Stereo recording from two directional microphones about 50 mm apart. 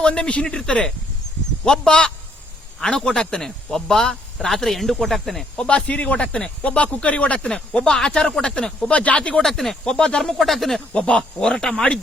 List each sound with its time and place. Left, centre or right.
0.0 s speech: left; by 5.5 s centre
5.5 s speech: left
8.9 s speech: left
9.4 s speech: centre
9.8 s speech: centre
10.2 s speech: centre
10.9 s speech: left
11.5 s speech: centre